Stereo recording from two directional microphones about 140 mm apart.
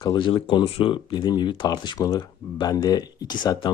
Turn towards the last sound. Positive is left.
turn(degrees=30)  # may be behind; listen again after turning